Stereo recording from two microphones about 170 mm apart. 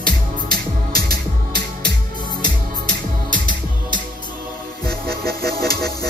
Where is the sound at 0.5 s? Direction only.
60° right (ahead or behind).